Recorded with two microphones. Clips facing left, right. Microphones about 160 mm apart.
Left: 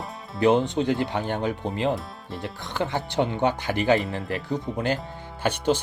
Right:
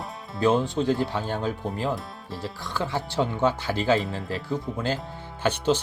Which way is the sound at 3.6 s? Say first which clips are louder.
Left 1 dB; 15° left (ahead or behind).